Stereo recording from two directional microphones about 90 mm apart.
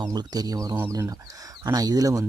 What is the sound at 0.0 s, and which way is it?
Speech, 50° right (ahead or behind).